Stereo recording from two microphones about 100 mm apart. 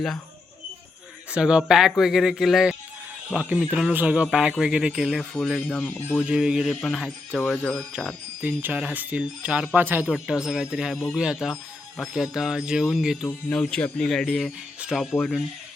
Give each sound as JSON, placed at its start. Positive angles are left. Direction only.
{"t": 1.3, "sound": "speech", "side_deg": -10}
{"t": 5.8, "sound": "speech", "side_deg": 20}
{"t": 6.2, "sound": "speech", "side_deg": -10}
{"t": 7.3, "sound": "speech", "side_deg": 15}
{"t": 7.9, "sound": "speech", "side_deg": -10}
{"t": 10.1, "sound": "speech", "side_deg": -5}
{"t": 10.9, "sound": "speech", "side_deg": 5}
{"t": 11.2, "sound": "speech", "side_deg": -5}
{"t": 13.5, "sound": "speech", "side_deg": 10}